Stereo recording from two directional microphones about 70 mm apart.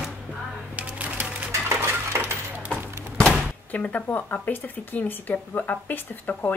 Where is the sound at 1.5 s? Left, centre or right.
Right.